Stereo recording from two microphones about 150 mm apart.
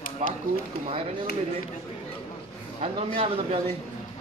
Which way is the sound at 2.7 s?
40° right (ahead or behind).